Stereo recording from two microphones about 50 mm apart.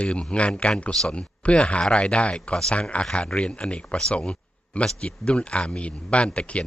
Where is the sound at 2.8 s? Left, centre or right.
Left.